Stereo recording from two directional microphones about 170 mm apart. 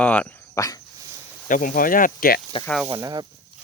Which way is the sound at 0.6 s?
20° left (ahead or behind).